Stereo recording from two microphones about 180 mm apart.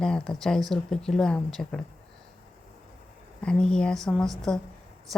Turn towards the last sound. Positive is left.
turn(degrees=5)  # may be behind; listen again after turning